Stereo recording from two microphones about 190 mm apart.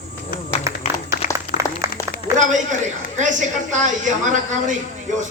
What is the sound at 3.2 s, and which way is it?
A man's voice, 40° right (ahead or behind).